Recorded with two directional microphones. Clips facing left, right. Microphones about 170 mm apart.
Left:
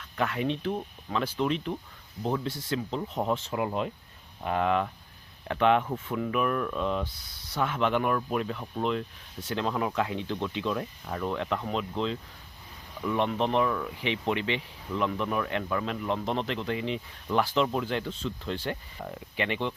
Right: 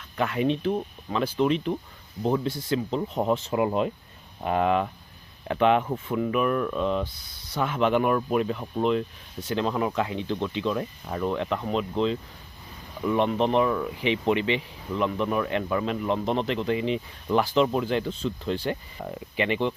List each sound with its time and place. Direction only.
0.2 s speech: 5° right (ahead or behind)
3.5 s speech: 20° right (ahead or behind)
5.5 s speech: 5° right (ahead or behind)
11.0 s speech: 10° right (ahead or behind)
13.1 s speech: 5° right (ahead or behind)